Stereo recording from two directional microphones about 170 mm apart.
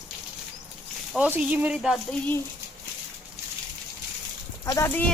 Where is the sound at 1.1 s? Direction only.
10° right (ahead or behind).